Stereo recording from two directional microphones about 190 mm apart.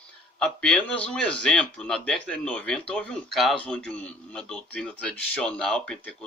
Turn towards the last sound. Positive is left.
turn(degrees=5)  # may be behind; listen again after turning